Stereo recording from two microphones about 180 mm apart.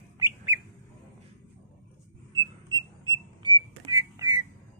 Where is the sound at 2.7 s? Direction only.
20° left (ahead or behind).